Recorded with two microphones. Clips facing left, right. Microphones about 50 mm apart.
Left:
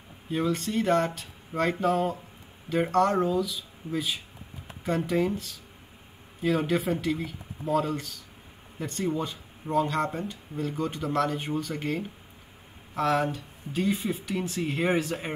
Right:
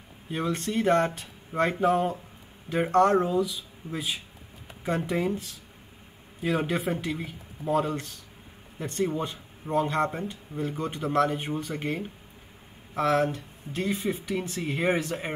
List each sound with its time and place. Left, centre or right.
0.7 s speech: centre
6.4 s speech: centre
8.7 s speech: centre
9.3 s speech: centre
12.9 s speech: centre